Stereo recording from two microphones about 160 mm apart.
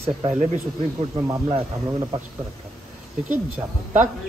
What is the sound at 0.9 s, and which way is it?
Speech, 20° right (ahead or behind).